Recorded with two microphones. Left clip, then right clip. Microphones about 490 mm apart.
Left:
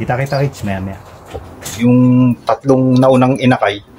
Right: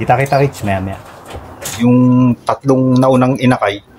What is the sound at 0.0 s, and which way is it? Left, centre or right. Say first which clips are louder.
Speech: right 5 dB; centre.